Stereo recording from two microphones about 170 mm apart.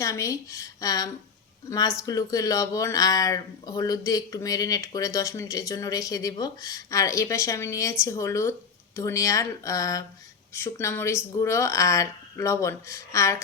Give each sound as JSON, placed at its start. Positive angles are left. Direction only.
{"t": 0.0, "sound": "speech", "side_deg": 20}